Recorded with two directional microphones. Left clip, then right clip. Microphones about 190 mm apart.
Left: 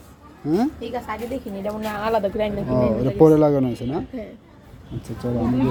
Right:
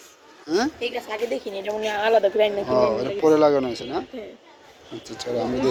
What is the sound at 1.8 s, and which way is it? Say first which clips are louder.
Speech: right 4 dB; 40° right (ahead or behind).